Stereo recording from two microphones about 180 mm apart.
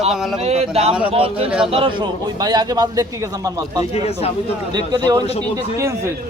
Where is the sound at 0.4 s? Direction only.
35° right (ahead or behind); by 3.8 s 20° right (ahead or behind).